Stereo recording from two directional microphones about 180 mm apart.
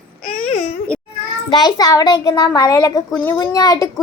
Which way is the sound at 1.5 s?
20° left (ahead or behind).